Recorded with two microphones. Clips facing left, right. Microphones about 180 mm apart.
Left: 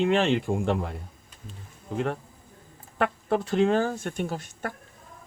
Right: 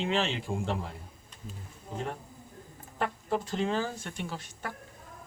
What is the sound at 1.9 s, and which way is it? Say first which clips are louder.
Speech: left 8 dB; 65° left (ahead or behind).